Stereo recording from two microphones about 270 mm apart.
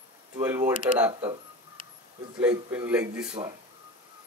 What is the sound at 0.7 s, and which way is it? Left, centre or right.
Speech, centre.